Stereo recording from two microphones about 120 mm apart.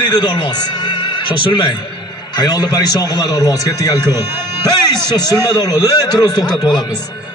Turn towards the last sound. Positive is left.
turn(degrees=35)  # may be behind; listen again after turning